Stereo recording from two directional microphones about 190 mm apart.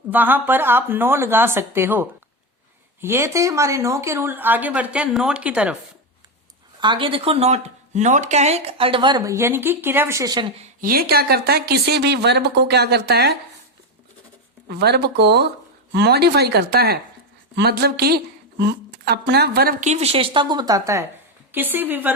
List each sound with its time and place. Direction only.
0.1 s speech: 10° right (ahead or behind)
6.7 s speech: 25° right (ahead or behind)
10.6 s speech: 45° right (ahead or behind)
14.7 s a woman's voice: 60° right (ahead or behind)
19.8 s speech: 35° right (ahead or behind); by 22.1 s 10° right (ahead or behind)